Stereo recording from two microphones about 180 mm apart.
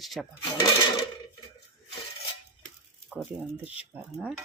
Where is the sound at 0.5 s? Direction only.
25° left (ahead or behind).